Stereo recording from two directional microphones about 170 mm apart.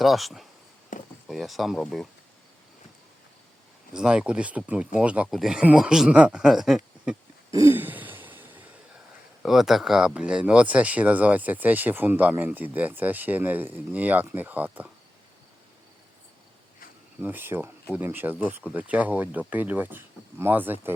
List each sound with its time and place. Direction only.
0.0 s speech: centre (ahead or behind)
0.9 s a sound: 50° left (ahead or behind)
1.3 s speech: centre (ahead or behind)
3.9 s speech: 5° right (ahead or behind)
7.5 s throat clearing: 15° right (ahead or behind)
9.4 s speech: centre (ahead or behind)
17.2 s speech: 10° right (ahead or behind)